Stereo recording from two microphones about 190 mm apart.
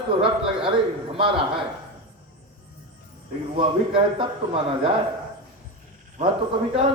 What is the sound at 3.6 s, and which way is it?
A man's voice, 25° right (ahead or behind).